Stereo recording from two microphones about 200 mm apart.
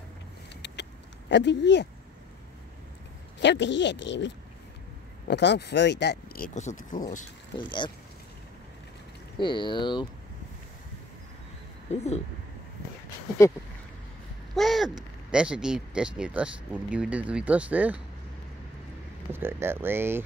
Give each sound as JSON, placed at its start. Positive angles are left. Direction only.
{"t": 1.3, "sound": "speech", "side_deg": 60}
{"t": 3.3, "sound": "speech", "side_deg": 65}
{"t": 5.3, "sound": "speech", "side_deg": 60}
{"t": 7.5, "sound": "speech", "side_deg": 25}
{"t": 9.4, "sound": "speech", "side_deg": 25}
{"t": 11.9, "sound": "speech", "side_deg": 35}
{"t": 14.5, "sound": "speech", "side_deg": 0}
{"t": 19.3, "sound": "speech", "side_deg": -10}